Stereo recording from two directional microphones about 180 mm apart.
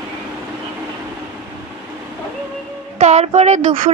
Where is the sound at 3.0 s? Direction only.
40° right (ahead or behind).